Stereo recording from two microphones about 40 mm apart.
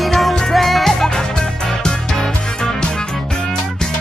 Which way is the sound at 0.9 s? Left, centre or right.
Centre.